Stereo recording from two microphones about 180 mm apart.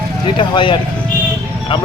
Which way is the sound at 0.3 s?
25° left (ahead or behind).